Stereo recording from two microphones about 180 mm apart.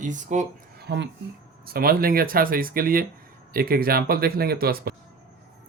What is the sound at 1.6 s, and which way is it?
Speech, 55° right (ahead or behind).